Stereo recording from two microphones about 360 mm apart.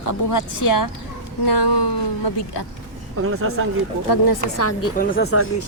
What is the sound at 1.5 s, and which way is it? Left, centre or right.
Speech, left.